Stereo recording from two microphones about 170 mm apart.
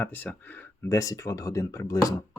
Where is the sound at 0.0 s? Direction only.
10° left (ahead or behind).